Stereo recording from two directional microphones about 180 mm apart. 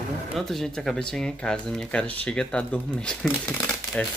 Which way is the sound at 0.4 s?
Centre (ahead or behind).